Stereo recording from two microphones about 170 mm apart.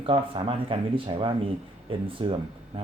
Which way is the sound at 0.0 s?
30° right (ahead or behind).